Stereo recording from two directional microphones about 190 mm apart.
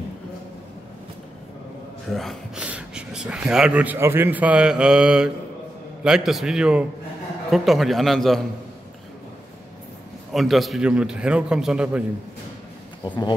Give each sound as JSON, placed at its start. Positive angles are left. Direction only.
{"t": 2.1, "sound": "speech", "side_deg": 0}
{"t": 10.3, "sound": "speech", "side_deg": 0}
{"t": 13.0, "sound": "speech", "side_deg": 25}